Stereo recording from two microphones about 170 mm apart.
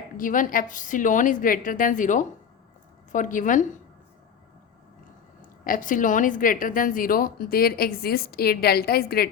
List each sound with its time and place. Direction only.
0.2 s a woman's voice: 50° left (ahead or behind)
5.6 s a woman's voice: 50° left (ahead or behind)